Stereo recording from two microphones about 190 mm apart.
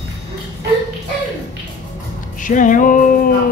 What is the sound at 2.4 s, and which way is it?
Music, 45° left (ahead or behind).